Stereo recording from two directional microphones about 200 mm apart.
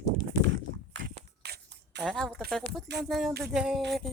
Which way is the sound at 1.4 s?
55° right (ahead or behind).